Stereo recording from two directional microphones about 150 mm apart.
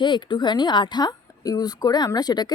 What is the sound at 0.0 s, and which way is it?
Speech, 30° left (ahead or behind).